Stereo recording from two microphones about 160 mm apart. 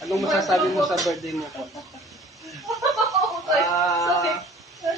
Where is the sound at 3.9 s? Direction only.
20° left (ahead or behind).